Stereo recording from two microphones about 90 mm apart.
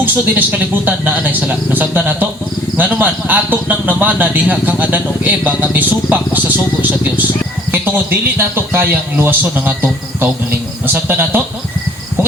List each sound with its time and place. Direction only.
0.0 s a man's voice: 20° right (ahead or behind)
7.7 s a man's voice: 20° right (ahead or behind)